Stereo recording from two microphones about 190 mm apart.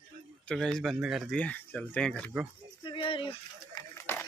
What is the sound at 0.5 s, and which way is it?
Speech, centre (ahead or behind).